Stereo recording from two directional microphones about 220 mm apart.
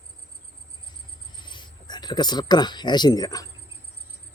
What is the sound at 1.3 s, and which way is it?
Speech, 20° left (ahead or behind).